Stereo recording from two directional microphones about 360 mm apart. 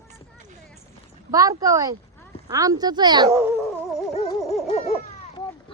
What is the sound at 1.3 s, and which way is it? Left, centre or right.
A woman's voice, centre.